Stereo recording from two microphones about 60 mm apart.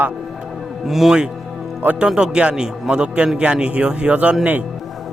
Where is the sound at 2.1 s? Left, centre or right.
Centre.